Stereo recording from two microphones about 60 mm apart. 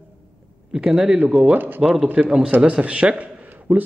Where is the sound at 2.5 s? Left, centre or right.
Right.